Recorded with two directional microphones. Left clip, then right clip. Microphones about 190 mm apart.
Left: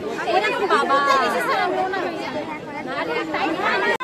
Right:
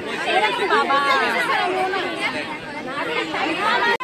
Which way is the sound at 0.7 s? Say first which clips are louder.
Left 2 dB; 20° left (ahead or behind).